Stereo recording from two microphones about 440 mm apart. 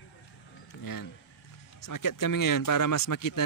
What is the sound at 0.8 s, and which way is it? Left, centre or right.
Speech, left.